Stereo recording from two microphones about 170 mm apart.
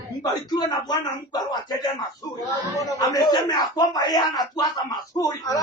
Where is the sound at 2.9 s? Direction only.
20° left (ahead or behind).